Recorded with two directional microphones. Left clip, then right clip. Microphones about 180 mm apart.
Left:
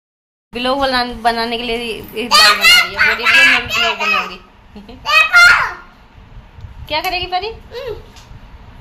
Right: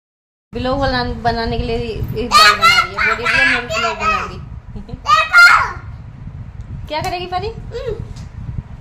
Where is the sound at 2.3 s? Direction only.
70° right (ahead or behind).